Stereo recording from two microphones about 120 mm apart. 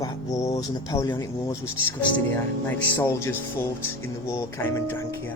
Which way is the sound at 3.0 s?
25° left (ahead or behind).